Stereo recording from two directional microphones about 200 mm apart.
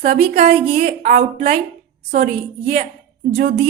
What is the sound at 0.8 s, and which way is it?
Speech, 50° right (ahead or behind).